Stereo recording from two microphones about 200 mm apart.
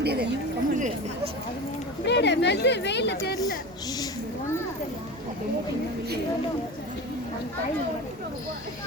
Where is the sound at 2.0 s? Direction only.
60° left (ahead or behind).